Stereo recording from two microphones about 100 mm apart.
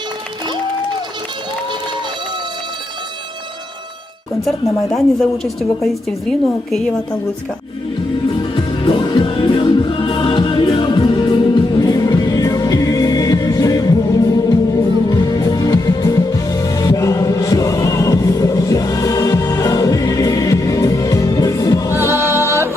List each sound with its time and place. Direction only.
4.9 s a woman's voice: 5° left (ahead or behind)
8.4 s music: 55° left (ahead or behind)
11.8 s music: 40° left (ahead or behind)
22.1 s music: 25° right (ahead or behind)